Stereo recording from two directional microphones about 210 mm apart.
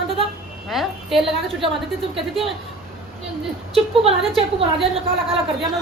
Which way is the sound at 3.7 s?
25° right (ahead or behind).